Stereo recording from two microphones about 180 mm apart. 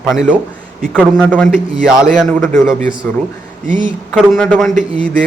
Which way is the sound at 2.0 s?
5° left (ahead or behind).